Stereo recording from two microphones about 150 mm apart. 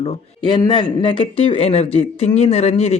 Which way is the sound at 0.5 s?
30° left (ahead or behind).